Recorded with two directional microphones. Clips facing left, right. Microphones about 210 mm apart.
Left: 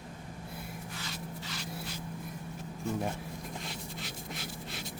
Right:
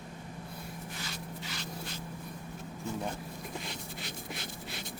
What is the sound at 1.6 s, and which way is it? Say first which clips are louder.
Spray: left 1 dB; 10° left (ahead or behind).